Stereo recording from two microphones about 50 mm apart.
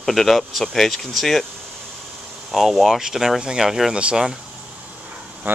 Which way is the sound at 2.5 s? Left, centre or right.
Centre.